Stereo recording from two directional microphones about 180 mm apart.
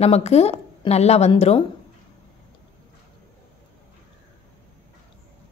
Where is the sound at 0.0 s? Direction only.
35° left (ahead or behind).